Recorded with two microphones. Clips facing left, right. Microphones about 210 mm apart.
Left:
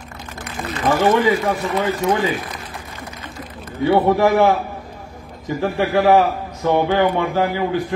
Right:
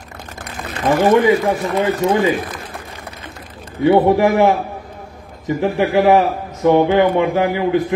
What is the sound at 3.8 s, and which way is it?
A man's voice, 20° right (ahead or behind).